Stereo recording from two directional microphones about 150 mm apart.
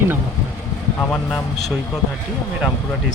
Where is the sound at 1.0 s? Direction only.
5° left (ahead or behind).